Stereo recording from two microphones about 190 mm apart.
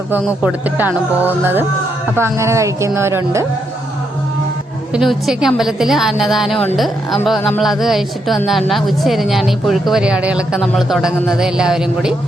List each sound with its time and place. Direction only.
0.1 s speech: 10° right (ahead or behind)
4.9 s speech: centre (ahead or behind)